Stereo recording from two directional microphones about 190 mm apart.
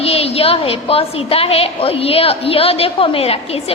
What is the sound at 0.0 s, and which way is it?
A woman's voice, 30° left (ahead or behind).